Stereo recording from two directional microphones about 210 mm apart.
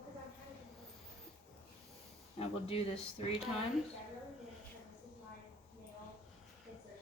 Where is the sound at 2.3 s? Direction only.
30° left (ahead or behind).